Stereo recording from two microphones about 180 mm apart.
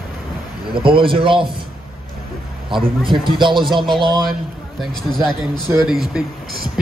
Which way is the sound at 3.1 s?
25° right (ahead or behind).